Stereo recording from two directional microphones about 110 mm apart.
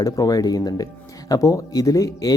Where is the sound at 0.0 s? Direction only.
35° left (ahead or behind).